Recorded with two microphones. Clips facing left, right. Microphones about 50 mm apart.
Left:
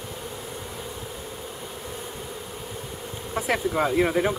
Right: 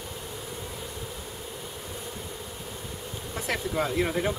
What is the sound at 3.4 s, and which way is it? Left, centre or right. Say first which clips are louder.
Speech: left 5 dB; centre.